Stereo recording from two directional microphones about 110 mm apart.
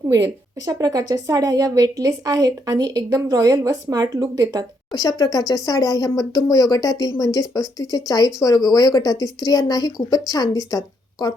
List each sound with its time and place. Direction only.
0.1 s a woman's voice: 30° right (ahead or behind)
4.9 s speech: 35° left (ahead or behind)